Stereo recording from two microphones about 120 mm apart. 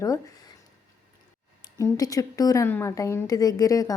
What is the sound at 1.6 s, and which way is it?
A woman's voice, 30° left (ahead or behind).